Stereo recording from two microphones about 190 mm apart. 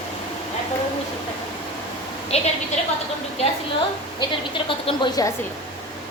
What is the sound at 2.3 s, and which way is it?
Speech, 35° left (ahead or behind).